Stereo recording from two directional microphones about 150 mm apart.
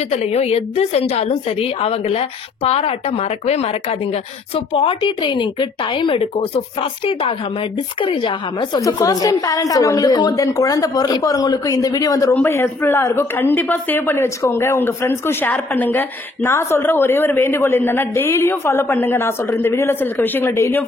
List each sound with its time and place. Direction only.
0.1 s a woman's voice: 45° left (ahead or behind); by 20.8 s 15° left (ahead or behind)